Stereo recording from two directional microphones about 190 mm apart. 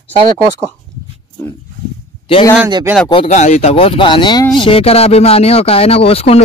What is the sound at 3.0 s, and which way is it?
Speech, 35° left (ahead or behind).